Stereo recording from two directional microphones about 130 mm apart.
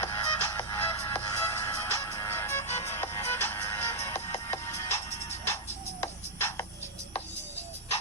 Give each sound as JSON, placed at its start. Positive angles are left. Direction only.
{"t": 0.0, "sound": "music", "side_deg": 20}